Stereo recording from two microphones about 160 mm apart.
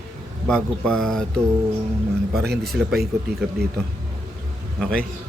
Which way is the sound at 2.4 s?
85° right.